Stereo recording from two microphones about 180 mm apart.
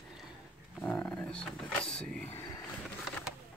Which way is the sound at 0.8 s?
5° left (ahead or behind).